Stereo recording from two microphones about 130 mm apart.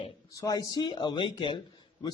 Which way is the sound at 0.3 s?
25° left (ahead or behind).